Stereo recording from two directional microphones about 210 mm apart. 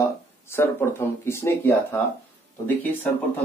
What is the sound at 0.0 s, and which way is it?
Speech, 10° left (ahead or behind).